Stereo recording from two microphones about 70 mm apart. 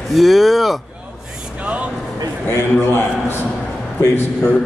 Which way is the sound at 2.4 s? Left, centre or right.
Left.